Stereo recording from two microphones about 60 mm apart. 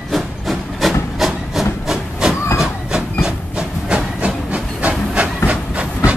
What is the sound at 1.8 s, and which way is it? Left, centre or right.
Steam, centre.